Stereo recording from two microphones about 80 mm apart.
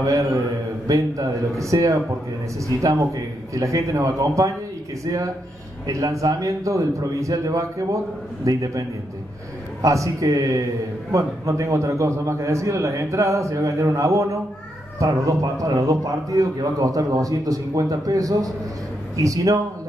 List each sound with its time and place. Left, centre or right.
0.0 s a man's voice: right
5.9 s a man's voice: right